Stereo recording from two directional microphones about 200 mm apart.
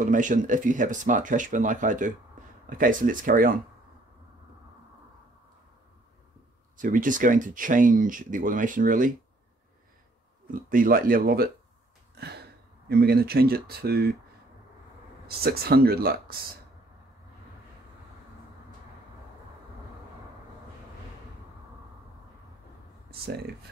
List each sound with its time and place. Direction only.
0.0 s speech: 40° right (ahead or behind)
6.8 s speech: 40° right (ahead or behind)
10.5 s speech: 45° right (ahead or behind)
12.8 s speech: 55° right (ahead or behind)
15.2 s speech: 50° right (ahead or behind)
23.2 s speech: 50° right (ahead or behind)